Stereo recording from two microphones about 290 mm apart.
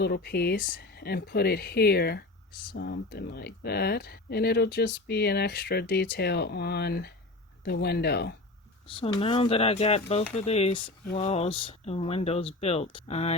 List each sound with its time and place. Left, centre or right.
0.0 s speech: left
9.0 s speech: centre